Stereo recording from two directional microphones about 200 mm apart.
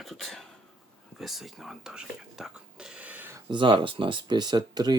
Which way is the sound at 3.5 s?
25° right (ahead or behind).